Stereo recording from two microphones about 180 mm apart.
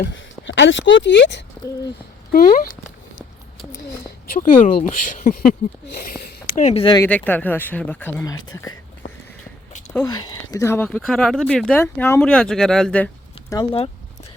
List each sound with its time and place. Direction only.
0.0 s speech: 90° left; by 1.5 s 75° left (ahead or behind)
2.3 s speech: 50° left (ahead or behind)
4.3 s speech: 50° left (ahead or behind)
6.9 s speech: 10° left (ahead or behind)
10.1 s speech: 25° left (ahead or behind); by 13.1 s 5° left (ahead or behind)